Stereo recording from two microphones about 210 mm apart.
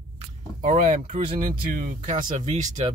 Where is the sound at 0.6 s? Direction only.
35° right (ahead or behind).